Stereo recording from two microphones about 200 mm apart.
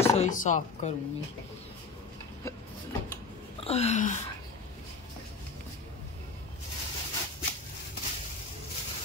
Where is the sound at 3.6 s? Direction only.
30° left (ahead or behind).